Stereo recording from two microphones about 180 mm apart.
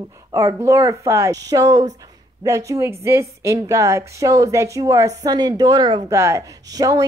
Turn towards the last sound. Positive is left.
turn(degrees=-20)  # may be behind; listen again after turning